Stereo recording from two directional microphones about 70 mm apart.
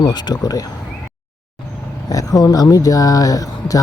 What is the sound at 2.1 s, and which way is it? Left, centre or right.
Speech, left.